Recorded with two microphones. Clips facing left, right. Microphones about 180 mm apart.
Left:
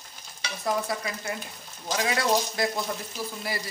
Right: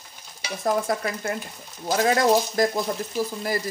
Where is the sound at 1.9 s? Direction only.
40° right (ahead or behind).